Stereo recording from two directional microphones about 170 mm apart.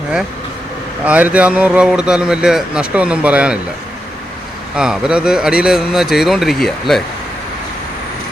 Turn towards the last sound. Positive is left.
turn(degrees=0)  # may be behind; listen again after turning